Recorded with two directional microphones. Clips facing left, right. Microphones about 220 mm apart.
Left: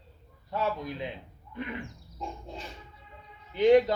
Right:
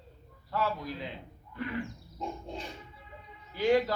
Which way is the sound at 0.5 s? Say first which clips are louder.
Left 1 dB; 20° left (ahead or behind).